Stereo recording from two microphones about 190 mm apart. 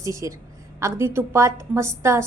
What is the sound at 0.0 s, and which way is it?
A woman's voice, 15° right (ahead or behind).